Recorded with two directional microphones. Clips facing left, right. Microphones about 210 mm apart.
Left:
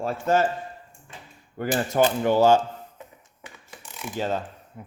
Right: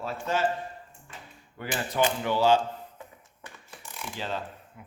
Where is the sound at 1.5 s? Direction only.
45° left (ahead or behind).